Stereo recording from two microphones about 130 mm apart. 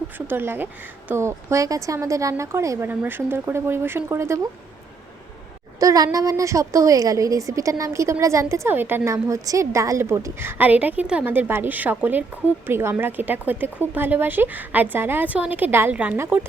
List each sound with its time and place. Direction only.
0.3 s a woman's voice: 15° right (ahead or behind)
5.8 s a woman's voice: 25° right (ahead or behind)